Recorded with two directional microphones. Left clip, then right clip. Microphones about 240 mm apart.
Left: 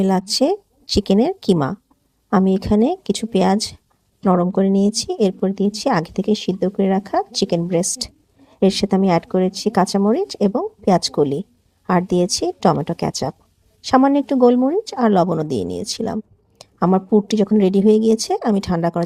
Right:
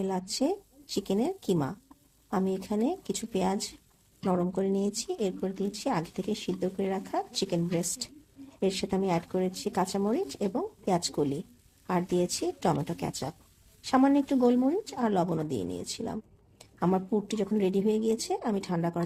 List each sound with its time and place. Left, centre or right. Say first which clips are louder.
0.0 s speech: left 13 dB; left